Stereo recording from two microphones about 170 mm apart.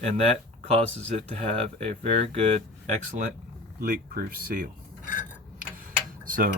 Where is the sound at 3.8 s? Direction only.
55° right (ahead or behind).